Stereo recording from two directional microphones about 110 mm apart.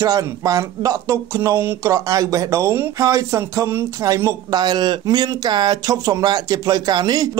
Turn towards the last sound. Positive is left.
turn(degrees=-40)  # may be behind; listen again after turning